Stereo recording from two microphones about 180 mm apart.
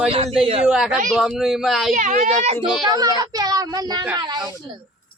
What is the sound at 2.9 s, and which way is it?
A child's voice, 20° right (ahead or behind).